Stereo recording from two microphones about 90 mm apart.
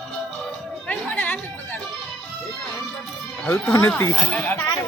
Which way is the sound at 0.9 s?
15° left (ahead or behind).